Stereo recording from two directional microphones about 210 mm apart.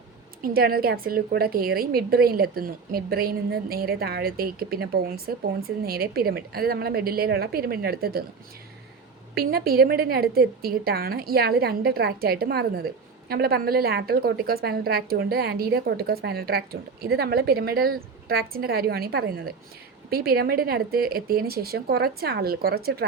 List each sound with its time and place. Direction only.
0.4 s a woman's voice: 45° right (ahead or behind)
9.3 s a woman's voice: 45° right (ahead or behind)